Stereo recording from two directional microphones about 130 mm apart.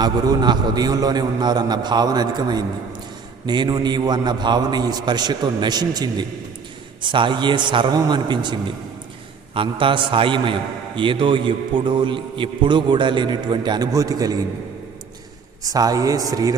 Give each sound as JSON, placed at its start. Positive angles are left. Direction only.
{"t": 0.0, "sound": "a man's voice", "side_deg": -30}
{"t": 15.6, "sound": "speech", "side_deg": -30}